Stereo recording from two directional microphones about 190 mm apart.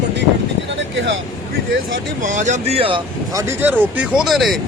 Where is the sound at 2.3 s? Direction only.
40° right (ahead or behind).